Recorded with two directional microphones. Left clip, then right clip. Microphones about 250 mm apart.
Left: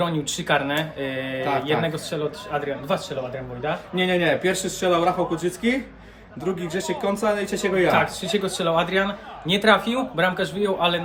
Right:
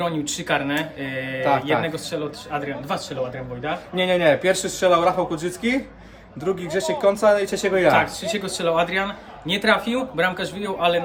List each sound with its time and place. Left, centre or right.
0.0 s a man's voice: centre
3.9 s speech: centre
7.9 s a man's voice: centre